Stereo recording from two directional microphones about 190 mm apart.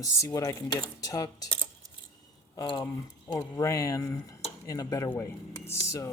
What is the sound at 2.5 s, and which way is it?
Speech, 20° left (ahead or behind).